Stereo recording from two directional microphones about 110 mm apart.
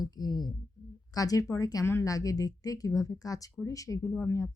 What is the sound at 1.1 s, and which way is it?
A woman's voice, 35° left (ahead or behind).